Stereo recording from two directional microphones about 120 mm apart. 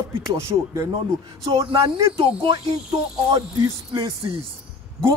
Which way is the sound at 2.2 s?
45° right (ahead or behind).